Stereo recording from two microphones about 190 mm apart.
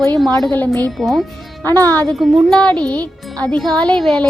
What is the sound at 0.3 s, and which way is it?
Speech, 5° left (ahead or behind).